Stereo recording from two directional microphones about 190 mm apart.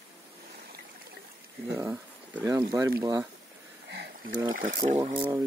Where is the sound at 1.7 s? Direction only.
15° right (ahead or behind).